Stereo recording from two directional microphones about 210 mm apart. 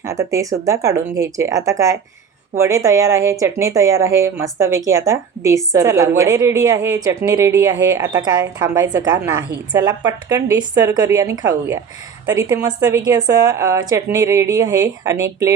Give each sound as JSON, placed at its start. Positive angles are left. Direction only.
{"t": 0.0, "sound": "speech", "side_deg": -15}
{"t": 12.6, "sound": "speech", "side_deg": -20}